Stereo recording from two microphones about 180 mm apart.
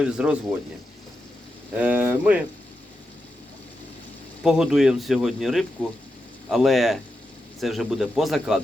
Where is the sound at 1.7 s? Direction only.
10° right (ahead or behind).